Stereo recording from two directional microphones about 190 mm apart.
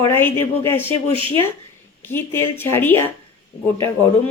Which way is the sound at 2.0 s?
10° left (ahead or behind).